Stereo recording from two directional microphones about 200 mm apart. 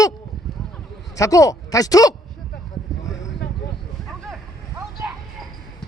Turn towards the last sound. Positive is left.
turn(degrees=-5)  # may be behind; listen again after turning